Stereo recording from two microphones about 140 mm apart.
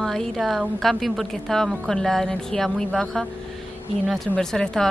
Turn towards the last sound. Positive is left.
turn(degrees=5)  # may be behind; listen again after turning